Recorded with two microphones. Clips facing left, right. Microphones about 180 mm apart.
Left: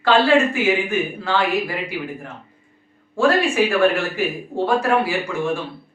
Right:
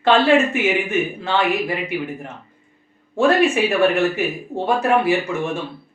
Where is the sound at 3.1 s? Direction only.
20° right (ahead or behind).